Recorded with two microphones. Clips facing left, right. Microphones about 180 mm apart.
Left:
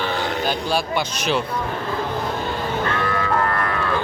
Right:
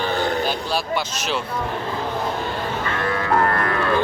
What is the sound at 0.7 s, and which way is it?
Speech, centre (ahead or behind).